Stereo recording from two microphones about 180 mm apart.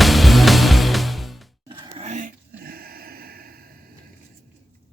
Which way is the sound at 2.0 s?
45° right (ahead or behind).